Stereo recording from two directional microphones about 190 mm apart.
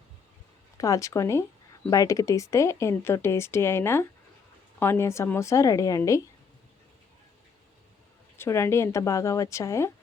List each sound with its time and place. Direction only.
0.8 s speech: 15° left (ahead or behind)
8.4 s speech: 15° left (ahead or behind)